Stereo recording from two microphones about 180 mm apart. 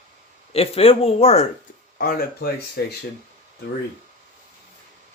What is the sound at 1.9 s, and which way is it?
Speech, 55° left (ahead or behind).